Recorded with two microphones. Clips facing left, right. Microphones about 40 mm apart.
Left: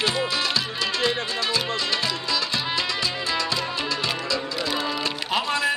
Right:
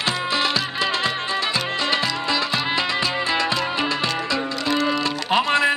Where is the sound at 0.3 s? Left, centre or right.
Right.